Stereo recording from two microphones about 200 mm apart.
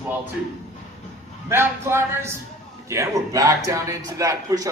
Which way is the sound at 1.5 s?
10° right (ahead or behind).